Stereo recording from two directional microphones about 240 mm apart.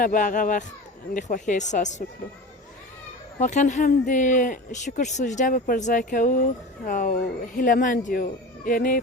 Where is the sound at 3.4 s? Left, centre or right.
Left.